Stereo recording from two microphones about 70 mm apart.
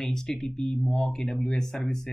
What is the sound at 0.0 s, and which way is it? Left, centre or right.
Speech, centre.